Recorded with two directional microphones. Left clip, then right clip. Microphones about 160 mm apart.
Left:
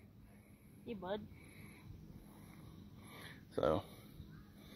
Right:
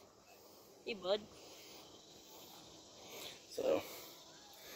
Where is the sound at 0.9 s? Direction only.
60° right (ahead or behind).